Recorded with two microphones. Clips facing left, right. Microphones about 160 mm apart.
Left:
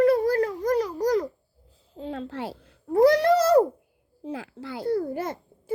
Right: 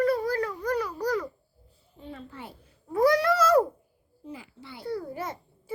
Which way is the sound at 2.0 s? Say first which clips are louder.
Left 9 dB; 90° left.